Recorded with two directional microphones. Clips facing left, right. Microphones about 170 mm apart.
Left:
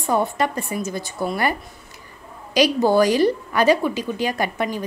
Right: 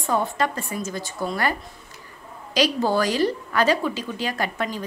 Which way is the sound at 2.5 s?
15° left (ahead or behind).